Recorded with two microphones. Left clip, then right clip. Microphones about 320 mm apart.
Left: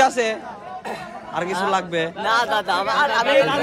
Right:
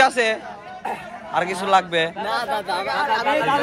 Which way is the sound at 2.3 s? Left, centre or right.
Centre.